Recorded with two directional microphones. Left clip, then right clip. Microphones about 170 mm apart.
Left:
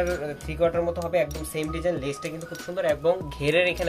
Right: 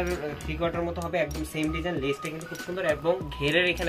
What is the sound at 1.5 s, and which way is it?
Speech, 40° left (ahead or behind).